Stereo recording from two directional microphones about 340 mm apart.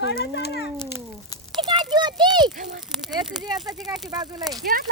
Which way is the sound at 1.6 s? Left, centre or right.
Centre.